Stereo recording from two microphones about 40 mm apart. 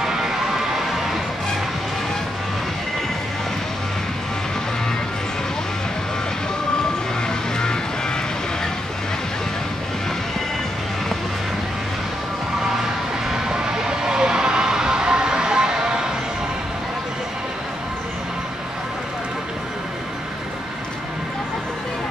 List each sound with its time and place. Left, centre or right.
0.0 s music: centre
7.2 s music: centre
13.3 s a sound: centre